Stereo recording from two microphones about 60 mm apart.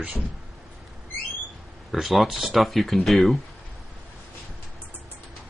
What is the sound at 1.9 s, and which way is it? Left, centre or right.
Speech, centre.